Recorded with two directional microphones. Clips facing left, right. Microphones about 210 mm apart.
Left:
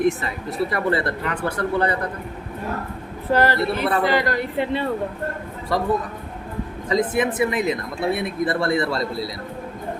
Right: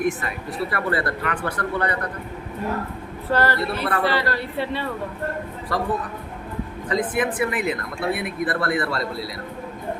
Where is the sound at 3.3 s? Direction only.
15° left (ahead or behind).